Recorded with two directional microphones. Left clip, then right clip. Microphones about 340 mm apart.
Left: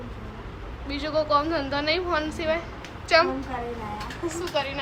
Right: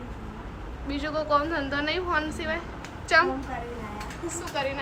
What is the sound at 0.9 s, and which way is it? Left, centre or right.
Speech, centre.